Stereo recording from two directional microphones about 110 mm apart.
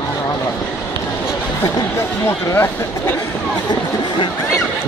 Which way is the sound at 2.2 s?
25° left (ahead or behind).